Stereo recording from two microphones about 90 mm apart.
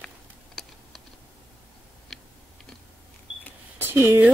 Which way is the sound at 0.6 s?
5° left (ahead or behind).